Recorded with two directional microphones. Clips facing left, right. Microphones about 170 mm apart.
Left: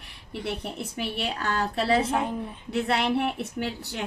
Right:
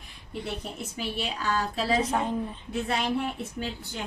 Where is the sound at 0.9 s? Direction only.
60° left (ahead or behind).